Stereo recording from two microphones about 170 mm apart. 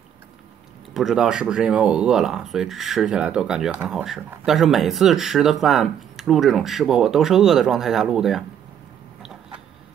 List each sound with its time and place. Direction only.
0.9 s speech: 5° right (ahead or behind)